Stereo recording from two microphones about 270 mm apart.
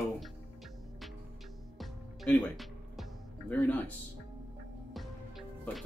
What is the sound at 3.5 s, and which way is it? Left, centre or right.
Speech, centre.